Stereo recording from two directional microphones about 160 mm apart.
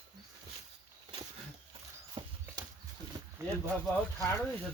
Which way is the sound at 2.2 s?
30° right (ahead or behind).